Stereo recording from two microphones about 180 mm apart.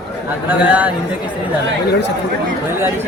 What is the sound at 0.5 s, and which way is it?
Speech, 10° right (ahead or behind).